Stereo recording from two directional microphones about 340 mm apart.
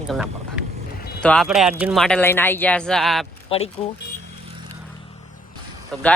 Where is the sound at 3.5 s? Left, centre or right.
Centre.